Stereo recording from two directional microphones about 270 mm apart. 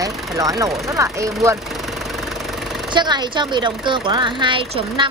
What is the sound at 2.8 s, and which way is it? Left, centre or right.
A woman's voice, centre.